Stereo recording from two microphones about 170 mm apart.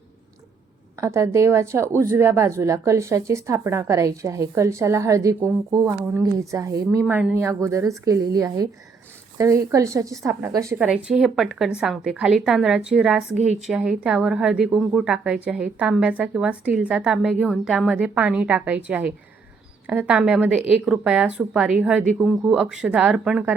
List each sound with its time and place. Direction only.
0.9 s a woman's voice: 20° right (ahead or behind)
7.0 s a woman's voice: 5° right (ahead or behind)
10.8 s a woman's voice: 5° right (ahead or behind)